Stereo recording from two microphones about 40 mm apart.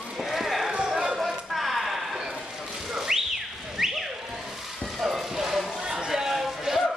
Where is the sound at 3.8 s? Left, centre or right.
Centre.